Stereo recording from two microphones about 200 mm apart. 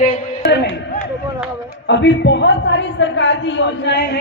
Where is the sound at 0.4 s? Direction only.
55° left (ahead or behind).